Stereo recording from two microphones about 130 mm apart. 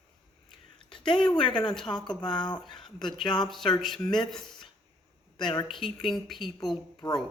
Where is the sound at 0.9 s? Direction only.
40° left (ahead or behind).